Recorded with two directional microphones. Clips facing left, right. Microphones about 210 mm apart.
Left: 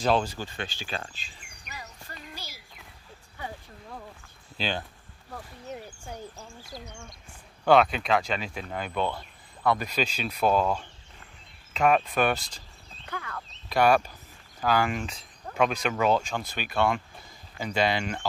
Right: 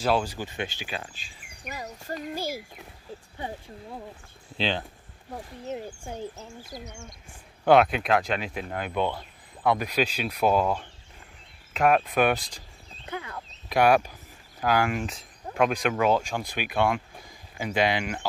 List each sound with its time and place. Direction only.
0.0 s speech: 10° right (ahead or behind)
1.6 s a sound: 45° right (ahead or behind)
3.3 s speech: 25° right (ahead or behind)
7.6 s speech: 5° right (ahead or behind)